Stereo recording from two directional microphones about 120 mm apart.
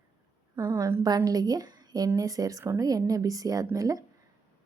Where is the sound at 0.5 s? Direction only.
30° right (ahead or behind).